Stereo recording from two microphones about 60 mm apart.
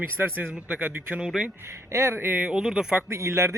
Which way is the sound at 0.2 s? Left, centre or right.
Right.